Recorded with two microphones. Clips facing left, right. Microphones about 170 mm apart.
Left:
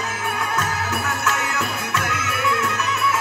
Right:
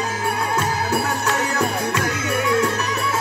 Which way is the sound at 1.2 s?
35° right (ahead or behind).